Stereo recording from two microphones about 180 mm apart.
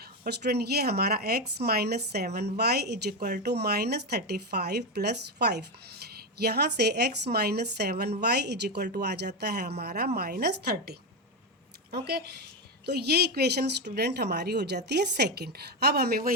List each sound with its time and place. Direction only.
0.0 s speech: 65° right (ahead or behind)